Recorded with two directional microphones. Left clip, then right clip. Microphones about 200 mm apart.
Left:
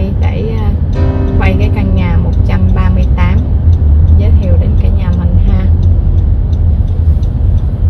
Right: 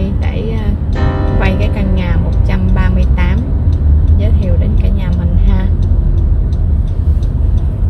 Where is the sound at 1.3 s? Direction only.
35° right (ahead or behind).